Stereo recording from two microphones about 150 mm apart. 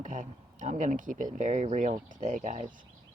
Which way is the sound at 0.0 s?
55° right (ahead or behind).